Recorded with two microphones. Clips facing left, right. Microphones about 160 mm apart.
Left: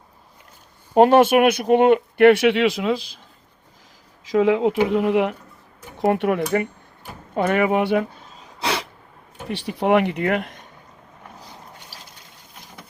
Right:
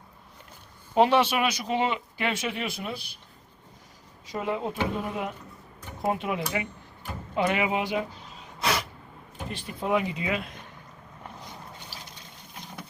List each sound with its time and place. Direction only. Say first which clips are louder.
0.9 s speech: left 8 dB; 50° left (ahead or behind); by 3.2 s 90° left
4.3 s speech: left 12 dB; 90° left
6.0 s speech: left 9 dB; 70° left (ahead or behind)
8.6 s a sound: left 3 dB; 30° left (ahead or behind)
9.5 s speech: left 9 dB; 80° left